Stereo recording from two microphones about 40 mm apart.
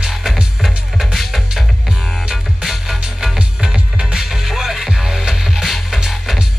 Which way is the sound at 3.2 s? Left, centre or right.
Centre.